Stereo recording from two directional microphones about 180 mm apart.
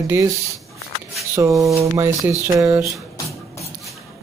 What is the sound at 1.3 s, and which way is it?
Speech, 15° right (ahead or behind).